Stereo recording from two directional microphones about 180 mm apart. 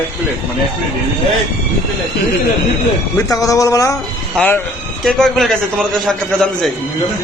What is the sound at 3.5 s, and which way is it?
Speech, 20° left (ahead or behind).